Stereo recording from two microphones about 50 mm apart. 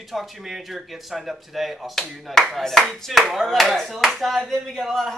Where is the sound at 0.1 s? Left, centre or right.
Centre.